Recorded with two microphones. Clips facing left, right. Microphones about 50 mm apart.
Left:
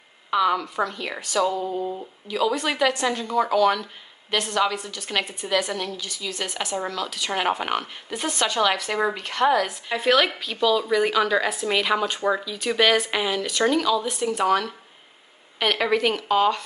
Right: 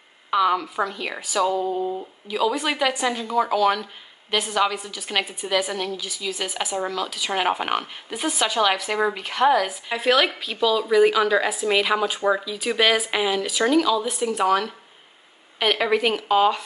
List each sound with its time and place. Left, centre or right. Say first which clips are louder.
0.3 s a woman's voice: right 1 dB; centre